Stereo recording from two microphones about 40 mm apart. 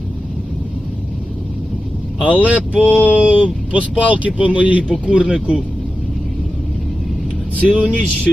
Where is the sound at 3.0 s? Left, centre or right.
Right.